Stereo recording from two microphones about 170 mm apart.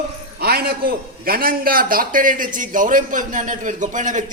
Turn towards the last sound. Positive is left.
turn(degrees=-50)  # may be behind; listen again after turning